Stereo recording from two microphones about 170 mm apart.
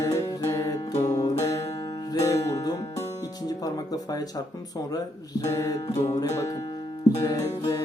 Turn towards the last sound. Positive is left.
turn(degrees=20)  # may be behind; listen again after turning